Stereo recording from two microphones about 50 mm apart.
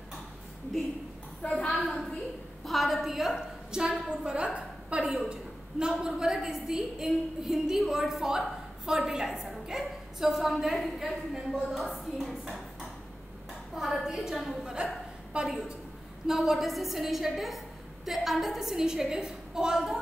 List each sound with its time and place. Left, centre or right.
1.7 s a woman's voice: centre
13.7 s a woman's voice: centre